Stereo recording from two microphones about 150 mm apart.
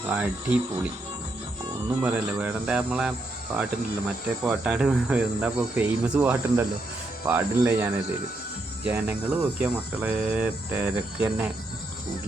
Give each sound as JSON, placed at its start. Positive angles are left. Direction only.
{"t": 0.1, "sound": "speech", "side_deg": -10}
{"t": 2.0, "sound": "speech", "side_deg": -10}
{"t": 4.4, "sound": "speech", "side_deg": -10}